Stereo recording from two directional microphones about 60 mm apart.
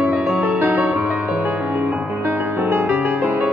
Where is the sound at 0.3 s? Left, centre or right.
Right.